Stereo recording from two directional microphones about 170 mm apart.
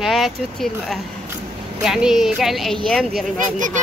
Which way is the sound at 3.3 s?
50° right (ahead or behind).